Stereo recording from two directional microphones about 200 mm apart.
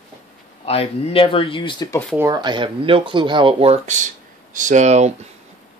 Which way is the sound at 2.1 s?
20° right (ahead or behind).